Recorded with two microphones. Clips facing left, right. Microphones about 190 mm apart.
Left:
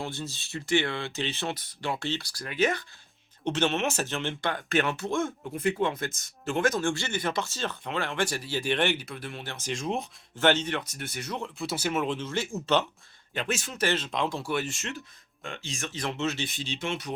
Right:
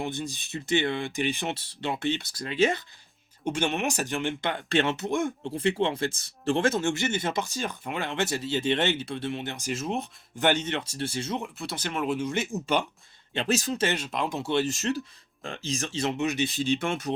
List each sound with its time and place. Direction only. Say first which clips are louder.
0.0 s speech: right 3 dB; 15° right (ahead or behind)
1.5 s speech: right 1 dB; 25° right (ahead or behind)
3.4 s speech: left 1 dB; 10° right (ahead or behind)
5.5 s speech: right 1 dB; 30° right (ahead or behind)
9.6 s speech: even; 5° right (ahead or behind)
10.3 s speech: left 1 dB; 15° right (ahead or behind)
11.5 s speech: left 3 dB; centre (ahead or behind)
12.0 s speech: right 3 dB; 10° right (ahead or behind)
13.3 s speech: right 5 dB; 35° right (ahead or behind)
13.8 s speech: even; 10° right (ahead or behind)
14.3 s speech: right 4 dB; 20° right (ahead or behind)
14.7 s speech: right 9 dB; 35° right (ahead or behind); by 16.4 s 15° right (ahead or behind)
16.6 s speech: right 6 dB; 55° right (ahead or behind)